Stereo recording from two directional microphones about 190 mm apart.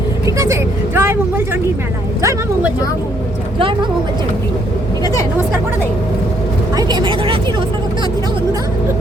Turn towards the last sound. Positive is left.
turn(degrees=-25)  # may be behind; listen again after turning